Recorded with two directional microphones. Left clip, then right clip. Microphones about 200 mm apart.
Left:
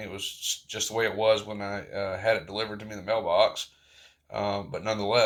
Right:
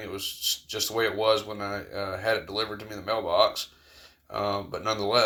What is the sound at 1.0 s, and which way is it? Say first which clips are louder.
Speech: left 1 dB; 15° right (ahead or behind).